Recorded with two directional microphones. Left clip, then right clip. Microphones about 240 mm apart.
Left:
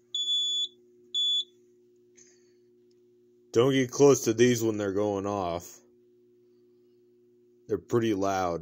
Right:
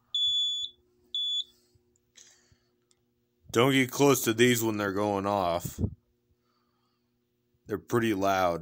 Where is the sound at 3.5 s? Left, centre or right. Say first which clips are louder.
Even; centre.